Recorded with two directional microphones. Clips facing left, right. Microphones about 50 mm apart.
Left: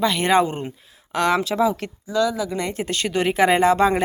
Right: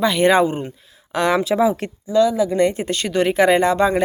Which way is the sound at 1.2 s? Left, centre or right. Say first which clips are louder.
Right 2 dB; centre.